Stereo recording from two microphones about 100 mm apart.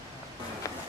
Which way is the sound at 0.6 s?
35° left (ahead or behind).